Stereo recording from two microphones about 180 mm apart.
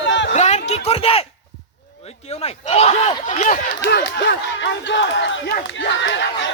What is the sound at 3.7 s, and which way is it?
Speech, 65° left (ahead or behind).